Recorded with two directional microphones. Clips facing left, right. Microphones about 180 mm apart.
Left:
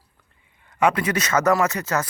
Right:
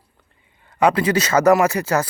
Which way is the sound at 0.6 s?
30° right (ahead or behind).